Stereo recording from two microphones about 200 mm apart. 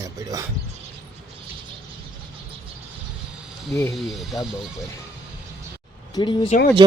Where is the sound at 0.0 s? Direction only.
15° right (ahead or behind).